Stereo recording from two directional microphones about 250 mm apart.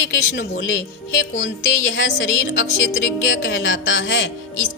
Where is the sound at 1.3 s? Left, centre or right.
Left.